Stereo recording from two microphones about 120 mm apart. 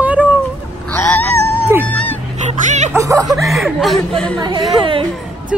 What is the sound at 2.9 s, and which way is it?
Music, 25° right (ahead or behind).